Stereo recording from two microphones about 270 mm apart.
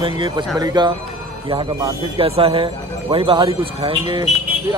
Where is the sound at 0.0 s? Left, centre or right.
Centre.